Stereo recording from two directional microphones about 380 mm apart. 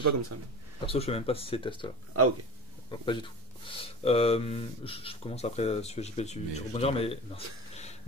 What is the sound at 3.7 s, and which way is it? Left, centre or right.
Speech, centre.